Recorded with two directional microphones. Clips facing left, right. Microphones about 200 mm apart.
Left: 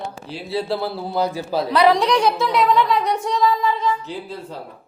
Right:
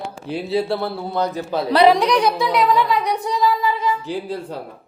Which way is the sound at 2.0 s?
Centre (ahead or behind).